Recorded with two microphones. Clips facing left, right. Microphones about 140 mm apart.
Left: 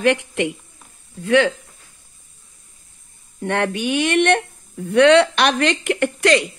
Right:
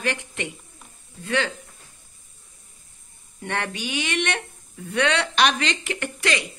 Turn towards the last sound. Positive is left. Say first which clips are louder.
# left 10 dB
turn(degrees=55)  # may be behind; listen again after turning